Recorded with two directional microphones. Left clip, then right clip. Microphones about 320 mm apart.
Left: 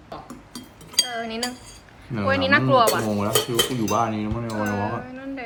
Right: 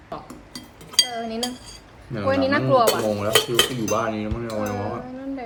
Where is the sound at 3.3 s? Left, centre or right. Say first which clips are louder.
Right 4 dB; centre.